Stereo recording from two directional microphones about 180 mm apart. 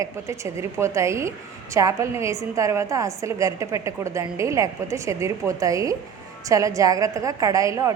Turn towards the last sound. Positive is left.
turn(degrees=-15)  # may be behind; listen again after turning